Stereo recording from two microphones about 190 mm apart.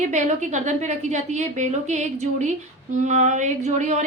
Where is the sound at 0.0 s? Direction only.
40° right (ahead or behind).